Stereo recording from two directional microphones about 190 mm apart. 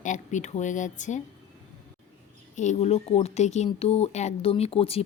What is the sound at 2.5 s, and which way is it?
Speech, 40° left (ahead or behind).